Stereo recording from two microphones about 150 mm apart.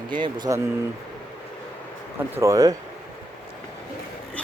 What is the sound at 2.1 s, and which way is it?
Speech, 20° right (ahead or behind).